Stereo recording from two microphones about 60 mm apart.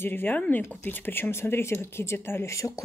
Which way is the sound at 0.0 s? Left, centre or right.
Left.